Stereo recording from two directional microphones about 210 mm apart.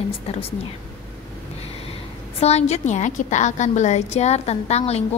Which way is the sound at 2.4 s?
30° left (ahead or behind).